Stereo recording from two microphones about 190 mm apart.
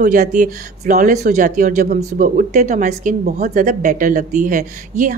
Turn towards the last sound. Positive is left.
turn(degrees=-45)  # may be behind; listen again after turning